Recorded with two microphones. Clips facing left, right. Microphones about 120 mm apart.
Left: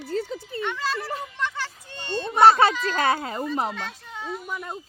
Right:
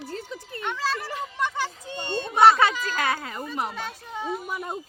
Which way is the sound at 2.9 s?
35° left (ahead or behind).